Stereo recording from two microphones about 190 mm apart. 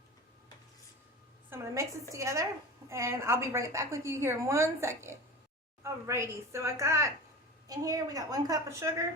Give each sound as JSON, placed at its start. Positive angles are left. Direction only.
{"t": 1.5, "sound": "a woman's voice", "side_deg": -15}